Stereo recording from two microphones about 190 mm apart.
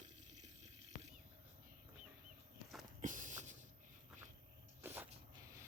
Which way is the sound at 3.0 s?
40° right (ahead or behind).